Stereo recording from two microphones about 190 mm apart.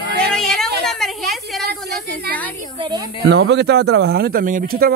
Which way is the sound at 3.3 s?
65° right (ahead or behind).